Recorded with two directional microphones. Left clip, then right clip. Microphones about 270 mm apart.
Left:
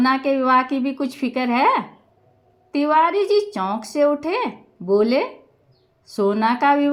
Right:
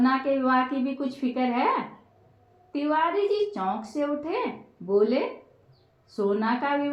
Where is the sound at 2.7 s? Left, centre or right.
Left.